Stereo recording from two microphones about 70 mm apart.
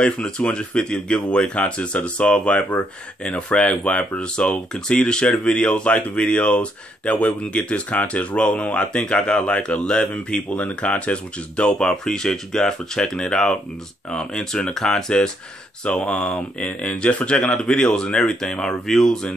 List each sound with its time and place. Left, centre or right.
0.0 s speech: centre